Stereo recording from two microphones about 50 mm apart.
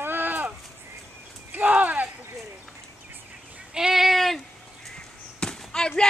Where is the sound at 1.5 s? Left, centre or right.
Right.